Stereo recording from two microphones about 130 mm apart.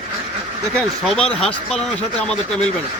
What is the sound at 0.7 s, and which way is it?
Speech, 5° left (ahead or behind).